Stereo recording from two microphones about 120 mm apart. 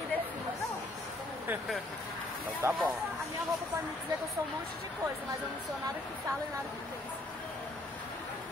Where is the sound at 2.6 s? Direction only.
20° right (ahead or behind).